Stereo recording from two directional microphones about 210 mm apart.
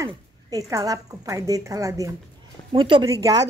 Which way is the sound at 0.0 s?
15° right (ahead or behind).